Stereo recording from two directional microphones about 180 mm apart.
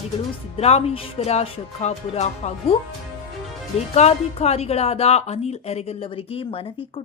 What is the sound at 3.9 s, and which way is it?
A woman's voice, 35° left (ahead or behind).